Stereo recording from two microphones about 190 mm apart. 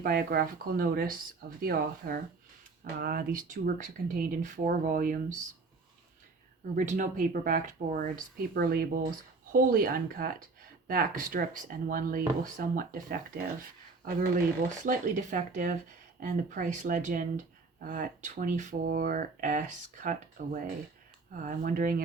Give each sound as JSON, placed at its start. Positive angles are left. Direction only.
{"t": 0.0, "sound": "speech", "side_deg": -50}
{"t": 6.7, "sound": "speech", "side_deg": -40}